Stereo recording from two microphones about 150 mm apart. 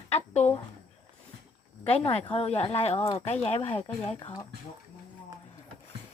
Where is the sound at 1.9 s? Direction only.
40° left (ahead or behind).